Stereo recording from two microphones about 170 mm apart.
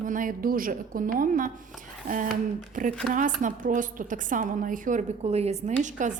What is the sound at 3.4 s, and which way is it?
A woman's voice, 50° right (ahead or behind).